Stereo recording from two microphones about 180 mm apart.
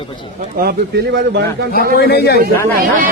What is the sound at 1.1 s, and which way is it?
Speech, 70° right (ahead or behind).